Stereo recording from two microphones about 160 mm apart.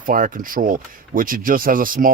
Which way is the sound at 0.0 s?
60° right (ahead or behind).